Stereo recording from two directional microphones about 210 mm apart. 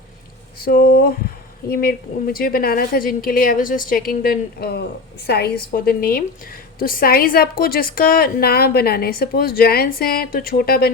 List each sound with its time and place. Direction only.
0.6 s a woman's voice: 45° left (ahead or behind)